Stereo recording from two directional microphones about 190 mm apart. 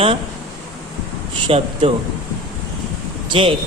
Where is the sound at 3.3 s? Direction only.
30° right (ahead or behind).